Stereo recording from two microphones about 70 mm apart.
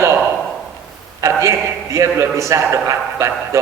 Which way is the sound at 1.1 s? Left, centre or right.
Right.